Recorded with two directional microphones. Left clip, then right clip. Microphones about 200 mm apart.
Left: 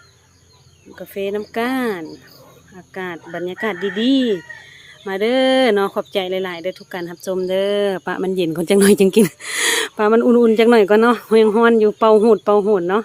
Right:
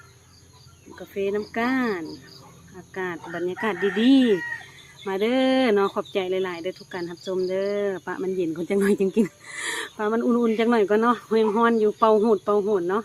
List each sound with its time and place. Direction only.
0.9 s speech: 40° left (ahead or behind); by 13.0 s 55° left (ahead or behind)